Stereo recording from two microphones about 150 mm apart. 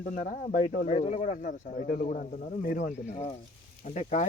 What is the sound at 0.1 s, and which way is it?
Speech, 55° left (ahead or behind).